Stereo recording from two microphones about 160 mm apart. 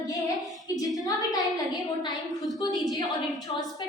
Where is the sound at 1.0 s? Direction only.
25° left (ahead or behind).